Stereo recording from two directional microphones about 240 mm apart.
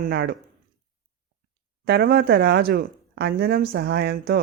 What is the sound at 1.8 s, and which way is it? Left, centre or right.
Speech, right.